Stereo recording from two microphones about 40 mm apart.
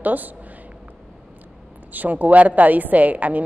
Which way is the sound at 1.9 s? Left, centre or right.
Right.